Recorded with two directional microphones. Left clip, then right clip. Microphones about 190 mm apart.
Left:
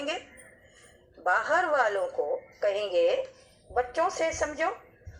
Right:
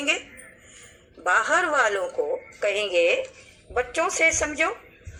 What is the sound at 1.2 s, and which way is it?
A woman's voice, 25° right (ahead or behind).